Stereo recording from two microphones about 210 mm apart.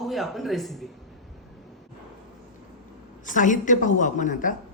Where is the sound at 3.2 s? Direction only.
40° left (ahead or behind).